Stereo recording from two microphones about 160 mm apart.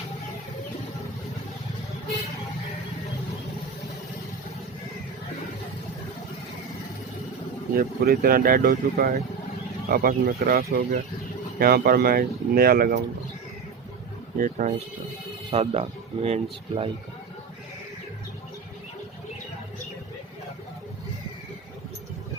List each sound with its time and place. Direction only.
7.8 s speech: 65° right (ahead or behind)
14.3 s speech: 55° right (ahead or behind)
15.4 s speech: 40° right (ahead or behind)